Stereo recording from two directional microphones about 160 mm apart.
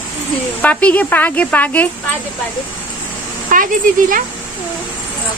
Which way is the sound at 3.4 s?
55° right (ahead or behind).